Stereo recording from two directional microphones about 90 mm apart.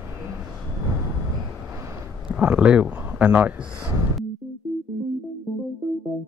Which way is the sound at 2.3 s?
10° right (ahead or behind).